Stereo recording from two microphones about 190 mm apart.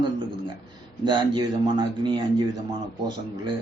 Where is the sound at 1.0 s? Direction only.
25° right (ahead or behind).